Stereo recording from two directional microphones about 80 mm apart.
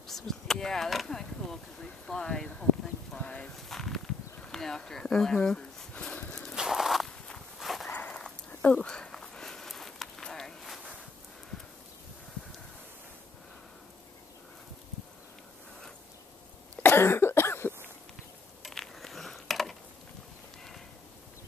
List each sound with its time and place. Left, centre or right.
0.0 s speech: centre
3.5 s speech: centre
6.5 s walk: centre
7.1 s walk: centre
7.6 s dog: centre
7.9 s a sound: centre
16.7 s cough: left
18.6 s mechanisms: centre